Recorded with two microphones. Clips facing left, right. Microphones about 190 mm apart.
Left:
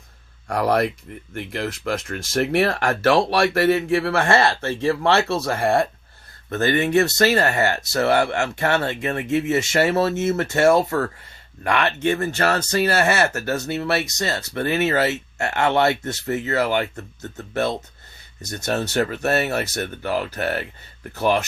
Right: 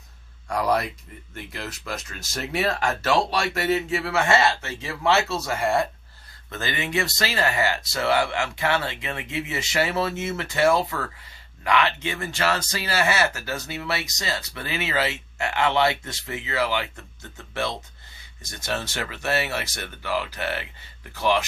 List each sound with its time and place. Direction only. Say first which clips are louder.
0.4 s speech: left 4 dB; 55° left (ahead or behind)
12.5 s speech: left 7 dB; 55° left (ahead or behind)